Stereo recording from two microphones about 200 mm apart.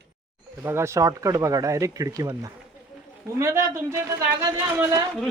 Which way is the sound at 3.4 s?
15° right (ahead or behind).